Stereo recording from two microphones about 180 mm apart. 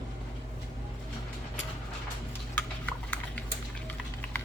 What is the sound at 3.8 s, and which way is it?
Typing, 10° left (ahead or behind).